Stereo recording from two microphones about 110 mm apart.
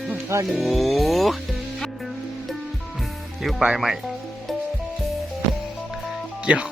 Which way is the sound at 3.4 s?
5° right (ahead or behind).